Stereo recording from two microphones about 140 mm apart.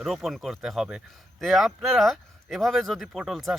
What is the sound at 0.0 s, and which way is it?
Speech, centre (ahead or behind).